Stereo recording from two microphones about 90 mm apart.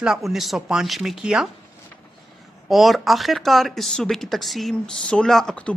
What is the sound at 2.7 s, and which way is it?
Speech, centre (ahead or behind).